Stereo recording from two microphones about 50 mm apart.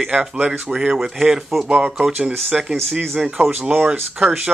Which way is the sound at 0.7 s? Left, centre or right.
Centre.